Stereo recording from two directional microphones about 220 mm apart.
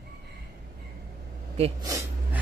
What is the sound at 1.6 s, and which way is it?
Speech, 20° right (ahead or behind).